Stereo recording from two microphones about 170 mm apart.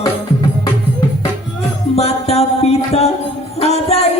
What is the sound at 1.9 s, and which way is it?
Music, 40° left (ahead or behind).